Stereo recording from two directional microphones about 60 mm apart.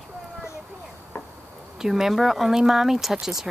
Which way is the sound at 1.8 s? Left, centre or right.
Centre.